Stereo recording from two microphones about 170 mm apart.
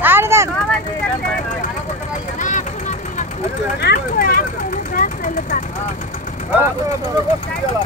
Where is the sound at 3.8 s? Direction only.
55° left (ahead or behind).